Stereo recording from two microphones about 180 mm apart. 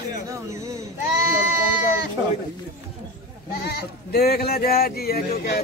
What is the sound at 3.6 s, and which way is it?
Speech, 60° left (ahead or behind).